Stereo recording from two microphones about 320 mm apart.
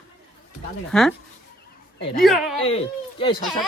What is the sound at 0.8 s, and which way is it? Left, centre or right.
Speech, centre.